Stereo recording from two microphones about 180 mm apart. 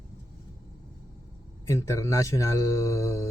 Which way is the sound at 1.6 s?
15° left (ahead or behind).